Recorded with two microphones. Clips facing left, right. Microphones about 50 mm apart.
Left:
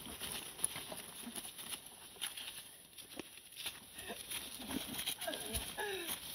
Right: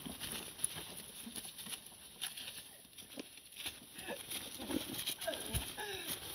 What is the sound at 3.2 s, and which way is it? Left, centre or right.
Horse, left.